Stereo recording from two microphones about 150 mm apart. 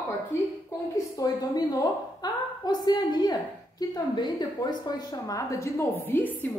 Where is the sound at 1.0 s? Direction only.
25° left (ahead or behind).